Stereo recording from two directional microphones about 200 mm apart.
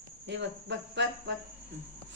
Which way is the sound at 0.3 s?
65° right (ahead or behind).